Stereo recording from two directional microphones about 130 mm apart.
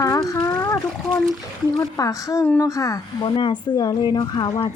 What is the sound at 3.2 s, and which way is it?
Speech, 40° left (ahead or behind).